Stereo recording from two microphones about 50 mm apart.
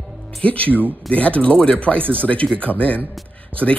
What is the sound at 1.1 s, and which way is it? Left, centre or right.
Speech, left.